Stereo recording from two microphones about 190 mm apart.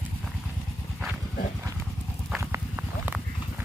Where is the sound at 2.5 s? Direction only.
10° right (ahead or behind).